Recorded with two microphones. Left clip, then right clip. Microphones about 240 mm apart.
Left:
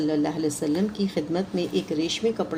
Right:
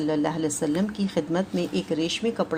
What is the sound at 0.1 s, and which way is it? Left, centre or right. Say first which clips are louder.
A woman's voice: even; right.